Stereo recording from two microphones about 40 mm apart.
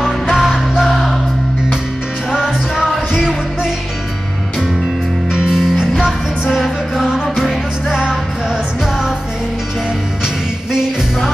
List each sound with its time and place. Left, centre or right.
0.0 s music: centre
2.3 s music: centre
5.3 s music: centre
6.5 s music: centre